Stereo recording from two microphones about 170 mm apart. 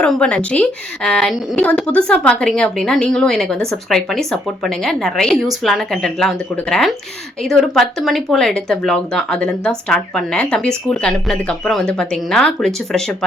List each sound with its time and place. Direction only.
0.0 s speech: 5° left (ahead or behind)